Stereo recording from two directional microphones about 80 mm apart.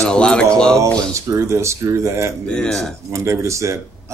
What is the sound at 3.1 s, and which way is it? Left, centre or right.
Speech, right.